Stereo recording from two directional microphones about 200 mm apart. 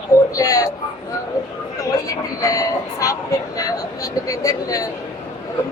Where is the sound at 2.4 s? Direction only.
15° left (ahead or behind).